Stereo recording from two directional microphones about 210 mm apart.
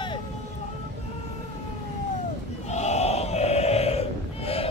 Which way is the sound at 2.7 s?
30° left (ahead or behind).